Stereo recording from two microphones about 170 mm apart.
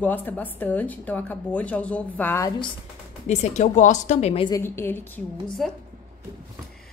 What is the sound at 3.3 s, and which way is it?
A woman's voice, 40° left (ahead or behind).